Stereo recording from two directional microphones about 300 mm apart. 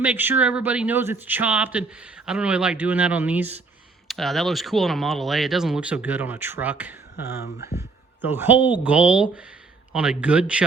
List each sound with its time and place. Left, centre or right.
0.0 s speech: centre
7.4 s speech: left
8.2 s speech: centre